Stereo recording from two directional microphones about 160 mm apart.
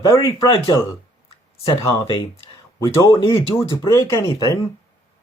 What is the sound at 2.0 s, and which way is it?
Speech, 35° left (ahead or behind).